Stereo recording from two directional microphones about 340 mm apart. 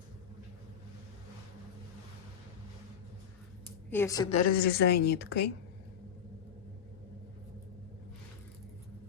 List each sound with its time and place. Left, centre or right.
3.8 s a woman's voice: centre; by 5.5 s left